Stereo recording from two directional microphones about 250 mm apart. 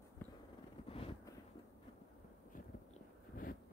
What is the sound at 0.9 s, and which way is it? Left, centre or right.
Wind noise, left.